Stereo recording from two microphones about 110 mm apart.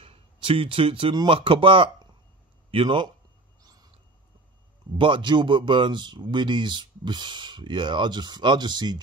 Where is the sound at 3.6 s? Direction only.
35° right (ahead or behind).